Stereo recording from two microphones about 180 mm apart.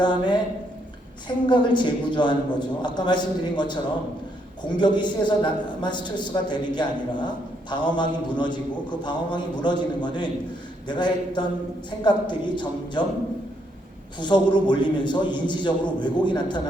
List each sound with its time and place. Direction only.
0.0 s a man's voice: 25° left (ahead or behind)
1.5 s a man's voice: 25° left (ahead or behind)
4.8 s a man's voice: 25° left (ahead or behind)
14.2 s a man's voice: 25° left (ahead or behind)